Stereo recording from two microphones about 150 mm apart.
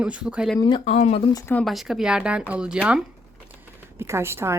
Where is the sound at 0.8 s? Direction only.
50° left (ahead or behind).